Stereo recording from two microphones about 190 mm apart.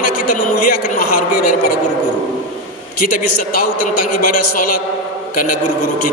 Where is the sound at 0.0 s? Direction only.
45° left (ahead or behind).